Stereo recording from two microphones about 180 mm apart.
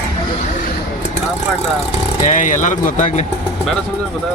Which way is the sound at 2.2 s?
45° left (ahead or behind).